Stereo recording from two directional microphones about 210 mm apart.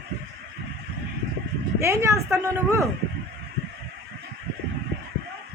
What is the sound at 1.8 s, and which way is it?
Speech, 15° right (ahead or behind).